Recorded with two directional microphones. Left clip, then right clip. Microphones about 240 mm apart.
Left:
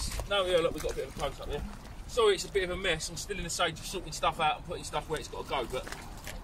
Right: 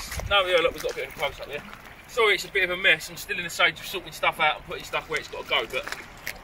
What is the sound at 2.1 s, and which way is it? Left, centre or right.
Speech, centre.